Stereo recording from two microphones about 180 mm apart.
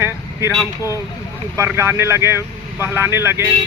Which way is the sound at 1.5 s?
15° right (ahead or behind).